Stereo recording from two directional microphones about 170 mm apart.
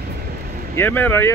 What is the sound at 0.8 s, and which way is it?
Speech, 10° left (ahead or behind).